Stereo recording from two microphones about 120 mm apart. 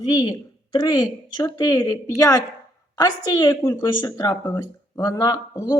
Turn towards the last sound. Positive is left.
turn(degrees=35)  # may be behind; listen again after turning